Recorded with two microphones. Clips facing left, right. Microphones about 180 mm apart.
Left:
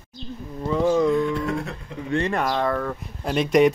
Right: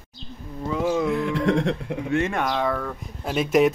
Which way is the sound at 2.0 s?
5° right (ahead or behind).